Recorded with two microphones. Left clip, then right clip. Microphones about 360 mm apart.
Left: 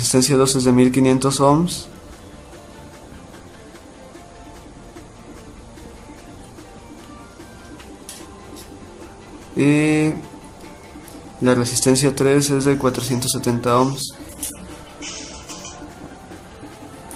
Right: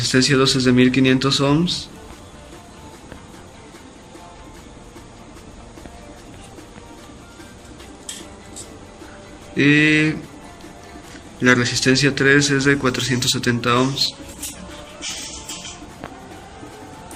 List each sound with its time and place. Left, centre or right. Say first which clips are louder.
0.0 s a man's voice: even; centre
9.6 s a man's voice: right 2 dB; centre
11.4 s a man's voice: right 1 dB; centre